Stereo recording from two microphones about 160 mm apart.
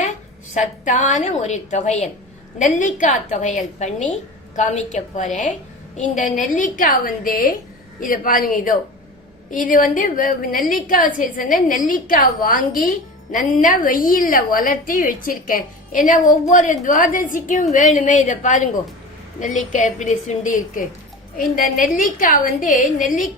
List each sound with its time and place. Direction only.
0.5 s a woman's voice: 50° left (ahead or behind)